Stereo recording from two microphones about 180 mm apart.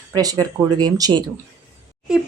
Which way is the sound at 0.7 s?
20° right (ahead or behind).